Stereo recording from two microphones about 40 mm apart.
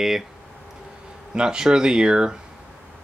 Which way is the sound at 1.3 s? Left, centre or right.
Centre.